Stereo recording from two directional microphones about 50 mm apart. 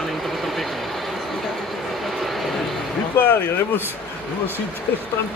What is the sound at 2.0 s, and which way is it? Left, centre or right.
Vehicle, centre.